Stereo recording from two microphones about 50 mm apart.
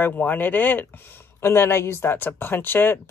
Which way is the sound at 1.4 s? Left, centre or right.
Left.